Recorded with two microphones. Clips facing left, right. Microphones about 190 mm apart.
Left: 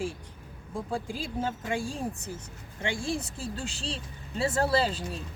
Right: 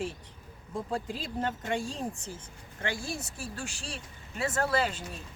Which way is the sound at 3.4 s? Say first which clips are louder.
Left 4 dB; 25° left (ahead or behind).